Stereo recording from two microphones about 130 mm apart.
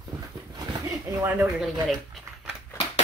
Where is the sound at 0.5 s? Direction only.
30° right (ahead or behind).